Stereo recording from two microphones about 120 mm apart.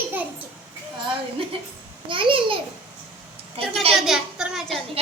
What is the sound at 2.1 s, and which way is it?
Babbling, 45° right (ahead or behind).